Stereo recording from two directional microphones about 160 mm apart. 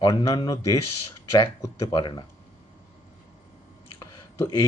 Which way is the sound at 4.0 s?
25° left (ahead or behind).